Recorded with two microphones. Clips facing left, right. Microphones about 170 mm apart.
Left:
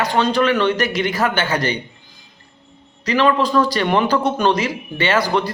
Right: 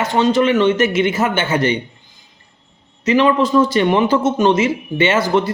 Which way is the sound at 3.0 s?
20° right (ahead or behind).